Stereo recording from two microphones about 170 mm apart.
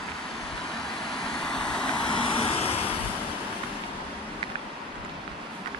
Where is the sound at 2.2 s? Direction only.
30° left (ahead or behind).